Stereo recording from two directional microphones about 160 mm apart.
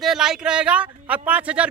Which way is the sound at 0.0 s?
Centre (ahead or behind).